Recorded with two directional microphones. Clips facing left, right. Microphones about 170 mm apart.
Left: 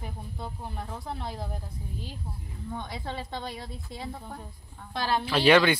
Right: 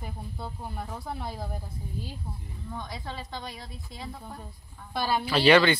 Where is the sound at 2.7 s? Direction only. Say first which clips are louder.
Left 2 dB; 25° left (ahead or behind).